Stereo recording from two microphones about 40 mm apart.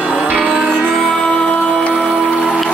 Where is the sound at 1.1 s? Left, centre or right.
Left.